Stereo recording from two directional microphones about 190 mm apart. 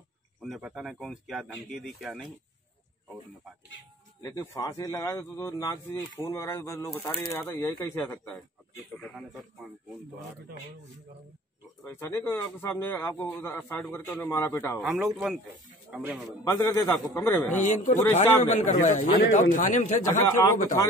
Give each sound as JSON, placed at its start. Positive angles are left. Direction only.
{"t": 0.4, "sound": "speech", "side_deg": -5}
{"t": 4.2, "sound": "speech", "side_deg": 15}
{"t": 11.8, "sound": "speech", "side_deg": 10}
{"t": 14.8, "sound": "a man's voice", "side_deg": 0}
{"t": 16.4, "sound": "speech", "side_deg": 15}
{"t": 17.6, "sound": "a man's voice", "side_deg": 40}
{"t": 20.4, "sound": "speech", "side_deg": 15}